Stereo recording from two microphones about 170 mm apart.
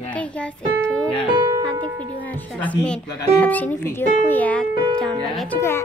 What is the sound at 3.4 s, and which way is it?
Speech, 10° left (ahead or behind).